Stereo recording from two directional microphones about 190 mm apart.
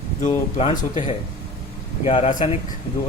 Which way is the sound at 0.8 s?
40° left (ahead or behind).